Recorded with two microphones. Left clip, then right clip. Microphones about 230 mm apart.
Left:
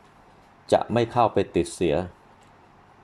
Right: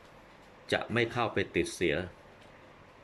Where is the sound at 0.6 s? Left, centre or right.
Left.